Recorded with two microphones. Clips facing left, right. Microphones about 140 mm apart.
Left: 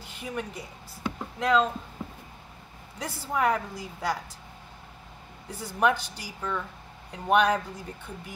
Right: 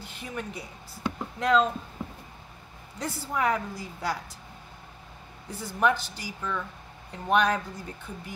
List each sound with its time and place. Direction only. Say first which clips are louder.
0.1 s speech: left 2 dB; 5° left (ahead or behind)
3.0 s speech: left 1 dB; 5° left (ahead or behind)
5.5 s speech: even; 10° left (ahead or behind)